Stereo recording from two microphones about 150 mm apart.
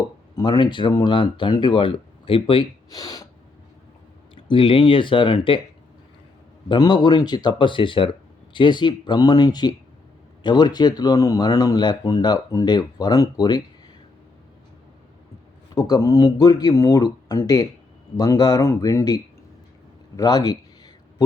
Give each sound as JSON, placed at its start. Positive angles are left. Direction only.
{"t": 0.3, "sound": "speech", "side_deg": 30}
{"t": 4.4, "sound": "speech", "side_deg": 35}
{"t": 6.7, "sound": "speech", "side_deg": 30}
{"t": 15.7, "sound": "speech", "side_deg": 25}
{"t": 20.1, "sound": "a sound", "side_deg": 25}